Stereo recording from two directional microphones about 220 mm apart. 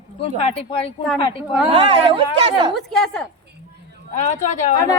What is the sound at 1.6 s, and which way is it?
A woman's voice, 25° right (ahead or behind).